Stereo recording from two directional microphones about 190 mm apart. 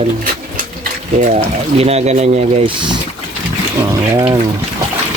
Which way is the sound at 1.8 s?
35° right (ahead or behind).